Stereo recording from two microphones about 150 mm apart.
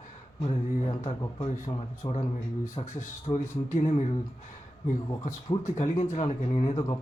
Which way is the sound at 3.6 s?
45° left (ahead or behind).